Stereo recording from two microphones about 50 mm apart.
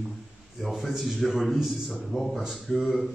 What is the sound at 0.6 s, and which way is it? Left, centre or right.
A man's voice, centre.